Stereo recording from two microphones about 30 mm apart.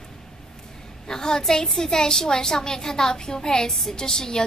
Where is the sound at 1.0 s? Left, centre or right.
Left.